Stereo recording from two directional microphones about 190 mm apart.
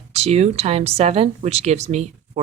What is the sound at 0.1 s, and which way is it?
Speech, 35° right (ahead or behind).